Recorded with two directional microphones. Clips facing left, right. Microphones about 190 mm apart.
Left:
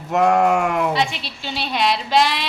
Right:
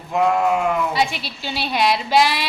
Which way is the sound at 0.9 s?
5° right (ahead or behind).